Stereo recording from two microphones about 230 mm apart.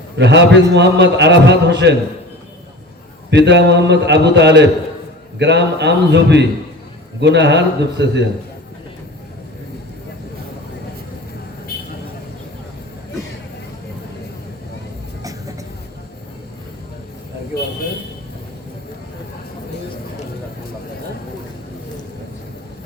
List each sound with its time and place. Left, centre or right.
0.2 s a man's voice: right
3.2 s a man's voice: right